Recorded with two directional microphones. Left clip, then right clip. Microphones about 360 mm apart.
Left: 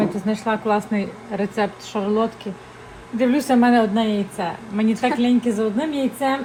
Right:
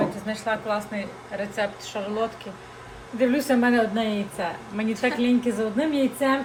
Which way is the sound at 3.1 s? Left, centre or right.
Centre.